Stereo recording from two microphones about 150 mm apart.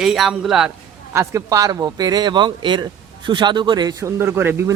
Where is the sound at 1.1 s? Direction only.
20° right (ahead or behind).